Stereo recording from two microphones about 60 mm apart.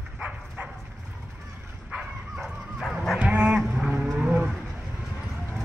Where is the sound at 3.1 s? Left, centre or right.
Right.